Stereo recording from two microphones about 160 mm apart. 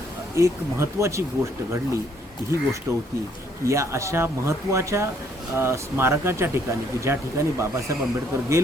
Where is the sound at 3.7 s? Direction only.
20° right (ahead or behind).